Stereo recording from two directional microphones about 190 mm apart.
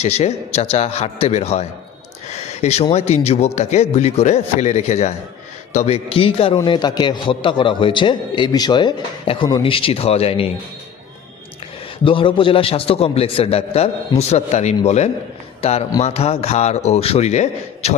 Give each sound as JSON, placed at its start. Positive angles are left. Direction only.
{"t": 0.0, "sound": "a man's voice", "side_deg": 35}
{"t": 12.0, "sound": "a man's voice", "side_deg": 25}